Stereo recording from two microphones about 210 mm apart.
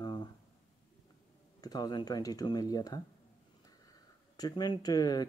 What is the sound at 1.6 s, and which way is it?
Speech, 20° left (ahead or behind).